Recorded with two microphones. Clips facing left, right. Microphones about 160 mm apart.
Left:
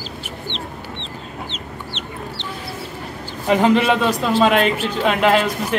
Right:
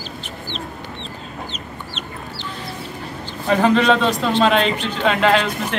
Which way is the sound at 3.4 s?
15° left (ahead or behind).